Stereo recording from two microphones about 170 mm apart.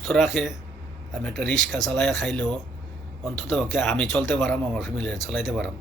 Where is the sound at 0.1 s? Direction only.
Centre (ahead or behind).